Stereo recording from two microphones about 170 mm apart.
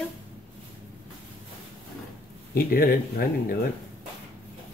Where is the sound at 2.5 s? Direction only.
60° left (ahead or behind).